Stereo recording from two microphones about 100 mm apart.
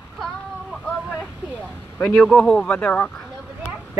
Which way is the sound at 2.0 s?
10° left (ahead or behind).